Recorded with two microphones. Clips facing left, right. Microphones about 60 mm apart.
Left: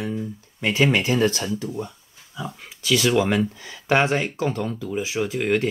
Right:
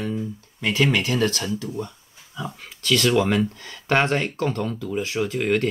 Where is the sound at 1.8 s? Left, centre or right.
Centre.